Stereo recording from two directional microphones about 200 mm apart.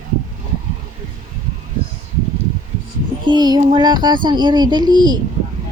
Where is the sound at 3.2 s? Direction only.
20° right (ahead or behind).